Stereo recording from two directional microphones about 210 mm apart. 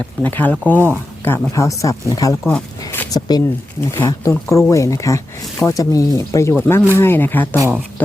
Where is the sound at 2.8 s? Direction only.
15° left (ahead or behind).